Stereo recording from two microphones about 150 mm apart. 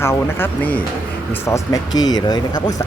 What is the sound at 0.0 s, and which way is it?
Speech, 15° left (ahead or behind).